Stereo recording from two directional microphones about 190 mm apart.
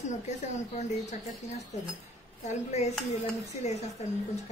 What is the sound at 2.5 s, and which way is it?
A woman's voice, 35° left (ahead or behind).